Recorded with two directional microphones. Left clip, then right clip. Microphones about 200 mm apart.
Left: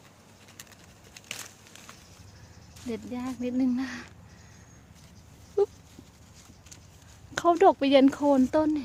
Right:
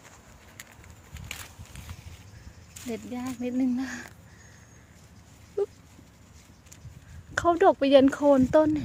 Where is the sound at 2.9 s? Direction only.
Centre (ahead or behind).